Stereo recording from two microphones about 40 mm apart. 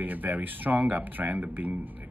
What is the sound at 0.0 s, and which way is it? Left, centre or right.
Speech, right.